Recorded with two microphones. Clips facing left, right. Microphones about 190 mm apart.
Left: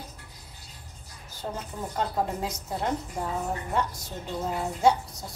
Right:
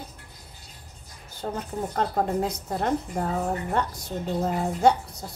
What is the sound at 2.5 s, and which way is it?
A woman's voice, 60° right (ahead or behind).